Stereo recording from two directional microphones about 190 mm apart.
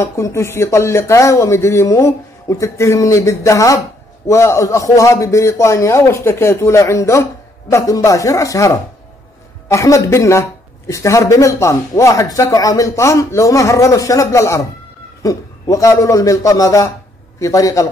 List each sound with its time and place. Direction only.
0.0 s speech: 15° left (ahead or behind)